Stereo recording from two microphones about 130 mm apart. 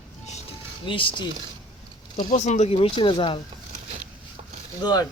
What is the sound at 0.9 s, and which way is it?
Speech, 40° left (ahead or behind).